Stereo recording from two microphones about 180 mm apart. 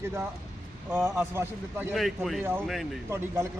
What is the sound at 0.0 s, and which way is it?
A man's voice, 15° right (ahead or behind).